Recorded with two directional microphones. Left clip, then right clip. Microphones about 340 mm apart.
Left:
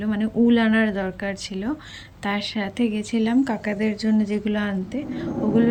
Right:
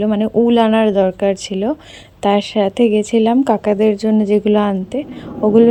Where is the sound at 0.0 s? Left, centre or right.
Centre.